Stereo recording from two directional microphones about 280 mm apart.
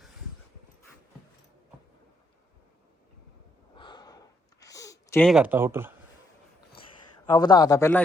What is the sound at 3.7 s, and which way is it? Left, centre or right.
Snort, centre.